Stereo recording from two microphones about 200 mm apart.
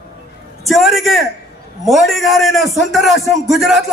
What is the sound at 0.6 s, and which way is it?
A man's voice, centre (ahead or behind).